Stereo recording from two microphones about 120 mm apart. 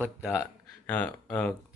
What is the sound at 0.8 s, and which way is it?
Speech, 15° left (ahead or behind).